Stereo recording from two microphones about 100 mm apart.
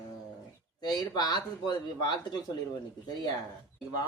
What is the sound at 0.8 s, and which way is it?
Speech, 45° left (ahead or behind).